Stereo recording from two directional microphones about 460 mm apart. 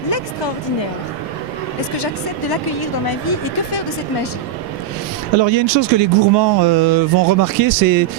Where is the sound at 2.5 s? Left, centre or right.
Left.